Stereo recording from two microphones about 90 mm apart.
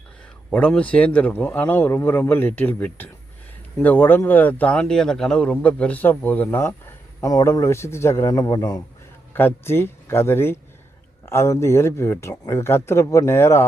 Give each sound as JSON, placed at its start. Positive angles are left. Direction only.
{"t": 0.5, "sound": "speech", "side_deg": 10}
{"t": 7.2, "sound": "speech", "side_deg": 35}
{"t": 8.3, "sound": "a man's voice", "side_deg": 45}
{"t": 9.3, "sound": "speech", "side_deg": 25}